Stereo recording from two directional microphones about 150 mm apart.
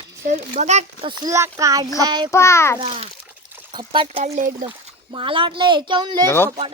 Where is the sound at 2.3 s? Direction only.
20° left (ahead or behind).